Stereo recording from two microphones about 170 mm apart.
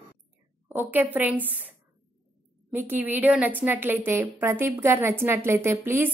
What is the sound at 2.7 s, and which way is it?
A woman's voice, 10° right (ahead or behind).